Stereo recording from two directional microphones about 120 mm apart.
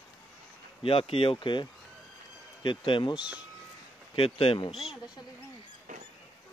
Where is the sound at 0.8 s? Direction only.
50° left (ahead or behind).